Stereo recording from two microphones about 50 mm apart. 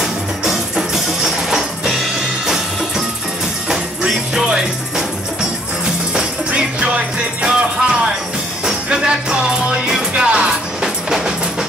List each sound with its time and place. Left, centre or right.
0.0 s music: centre
4.4 s music: centre
6.1 s music: right